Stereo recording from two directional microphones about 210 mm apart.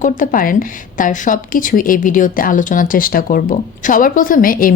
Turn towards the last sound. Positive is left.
turn(degrees=40)  # may be behind; listen again after turning